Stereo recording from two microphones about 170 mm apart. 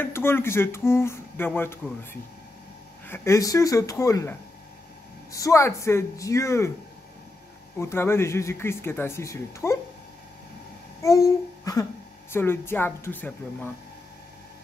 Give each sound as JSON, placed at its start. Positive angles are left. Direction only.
{"t": 0.0, "sound": "speech", "side_deg": 15}
{"t": 3.1, "sound": "speech", "side_deg": 20}
{"t": 7.7, "sound": "speech", "side_deg": 15}
{"t": 11.0, "sound": "a sound", "side_deg": 20}
{"t": 12.3, "sound": "speech", "side_deg": 15}